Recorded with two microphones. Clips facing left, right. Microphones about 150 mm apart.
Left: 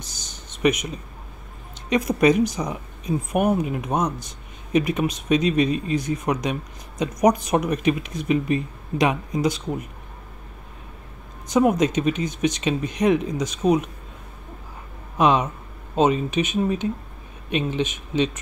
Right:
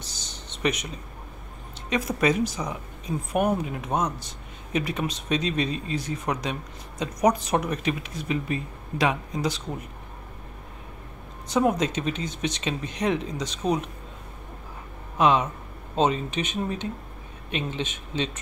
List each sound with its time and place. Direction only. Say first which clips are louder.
0.0 s a sound: even; 10° left (ahead or behind)
1.9 s speech: left 6 dB; 15° left (ahead or behind)
11.4 s speech: left 4 dB; 15° left (ahead or behind)
15.1 s speech: left 2 dB; 20° left (ahead or behind)